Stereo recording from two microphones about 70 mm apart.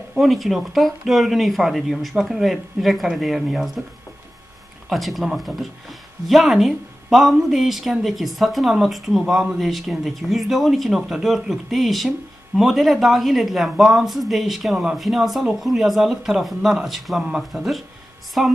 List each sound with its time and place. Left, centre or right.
0.1 s speech: centre
4.8 s speech: centre